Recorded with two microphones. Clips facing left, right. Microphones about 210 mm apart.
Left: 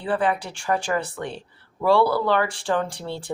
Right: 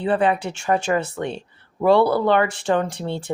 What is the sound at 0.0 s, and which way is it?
Speech, 25° right (ahead or behind).